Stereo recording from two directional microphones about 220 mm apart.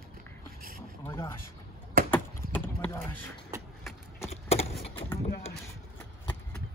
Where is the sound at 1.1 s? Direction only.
10° left (ahead or behind).